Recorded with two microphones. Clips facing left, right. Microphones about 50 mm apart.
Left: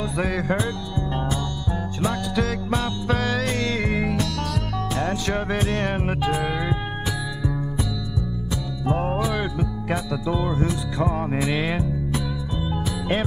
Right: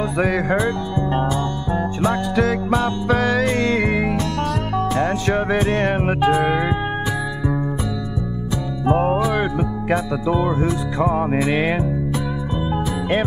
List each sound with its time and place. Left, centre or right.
0.2 s music: right
8.8 s music: right